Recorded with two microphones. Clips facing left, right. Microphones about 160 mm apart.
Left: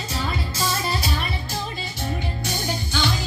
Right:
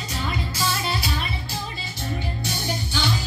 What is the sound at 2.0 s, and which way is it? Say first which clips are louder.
Music: even; 45° left (ahead or behind).